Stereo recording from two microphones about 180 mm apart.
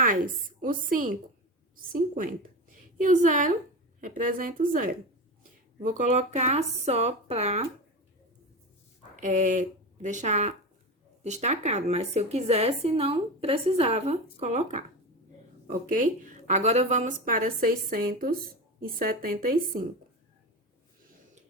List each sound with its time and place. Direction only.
0.6 s a woman's voice: 50° right (ahead or behind)
9.2 s a woman's voice: 45° right (ahead or behind)